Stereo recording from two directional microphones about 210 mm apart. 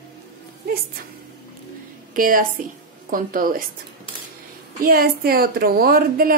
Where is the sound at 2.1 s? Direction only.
40° right (ahead or behind).